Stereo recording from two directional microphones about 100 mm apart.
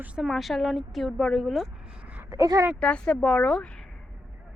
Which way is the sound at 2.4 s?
30° right (ahead or behind).